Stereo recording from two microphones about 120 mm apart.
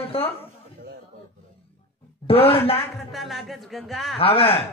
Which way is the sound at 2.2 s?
50° left (ahead or behind).